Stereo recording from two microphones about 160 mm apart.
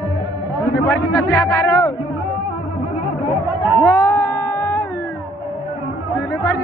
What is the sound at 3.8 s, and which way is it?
Music, 15° left (ahead or behind).